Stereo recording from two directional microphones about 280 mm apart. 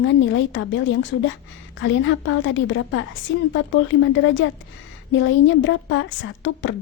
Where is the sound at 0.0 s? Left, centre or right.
Left.